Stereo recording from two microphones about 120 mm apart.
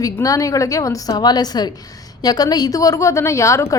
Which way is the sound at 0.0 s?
30° left (ahead or behind).